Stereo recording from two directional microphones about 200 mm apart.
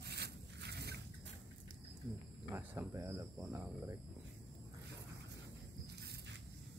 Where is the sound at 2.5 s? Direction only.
10° right (ahead or behind).